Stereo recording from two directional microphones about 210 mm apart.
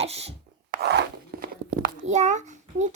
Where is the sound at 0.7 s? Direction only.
50° right (ahead or behind).